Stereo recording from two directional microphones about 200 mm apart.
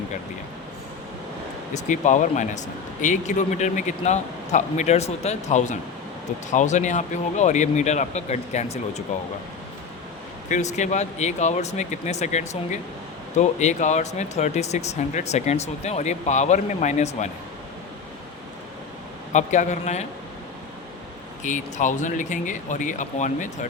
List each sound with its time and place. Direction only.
1.7 s speech: 40° left (ahead or behind)
10.5 s speech: 35° left (ahead or behind)
19.3 s speech: 35° left (ahead or behind)
21.4 s speech: 40° left (ahead or behind)